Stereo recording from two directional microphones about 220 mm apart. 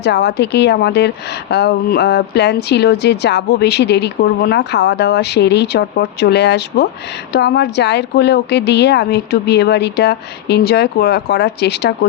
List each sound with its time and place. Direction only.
0.0 s a woman's voice: 50° left (ahead or behind)